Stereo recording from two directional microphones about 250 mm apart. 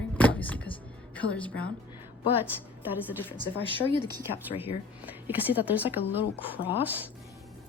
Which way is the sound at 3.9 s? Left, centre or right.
Centre.